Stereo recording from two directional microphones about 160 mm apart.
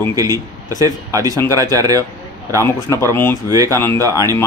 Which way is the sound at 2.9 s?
15° left (ahead or behind).